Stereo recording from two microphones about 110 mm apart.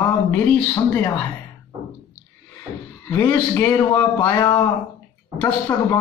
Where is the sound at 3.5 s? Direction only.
25° left (ahead or behind).